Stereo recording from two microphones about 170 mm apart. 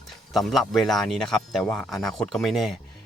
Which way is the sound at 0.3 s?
Centre (ahead or behind).